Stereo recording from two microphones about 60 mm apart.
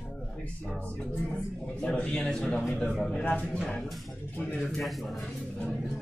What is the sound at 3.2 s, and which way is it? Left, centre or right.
Speech, left.